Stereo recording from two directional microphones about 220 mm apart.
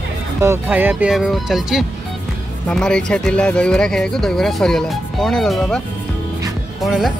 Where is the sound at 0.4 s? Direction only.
10° right (ahead or behind).